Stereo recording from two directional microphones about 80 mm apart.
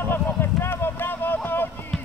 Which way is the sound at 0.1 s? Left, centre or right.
Left.